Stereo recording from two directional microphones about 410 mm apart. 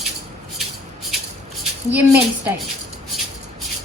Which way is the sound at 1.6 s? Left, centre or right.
Centre.